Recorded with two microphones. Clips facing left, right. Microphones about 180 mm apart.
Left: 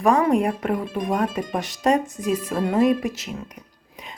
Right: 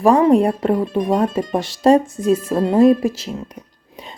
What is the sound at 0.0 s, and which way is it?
Speech, 30° right (ahead or behind).